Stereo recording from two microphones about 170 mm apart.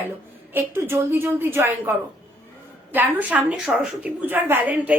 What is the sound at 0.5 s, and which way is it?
A woman's voice, 15° right (ahead or behind).